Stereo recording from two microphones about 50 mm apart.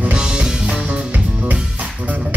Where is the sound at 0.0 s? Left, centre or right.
Centre.